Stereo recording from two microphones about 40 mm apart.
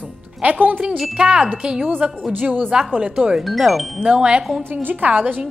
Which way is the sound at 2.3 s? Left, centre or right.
Right.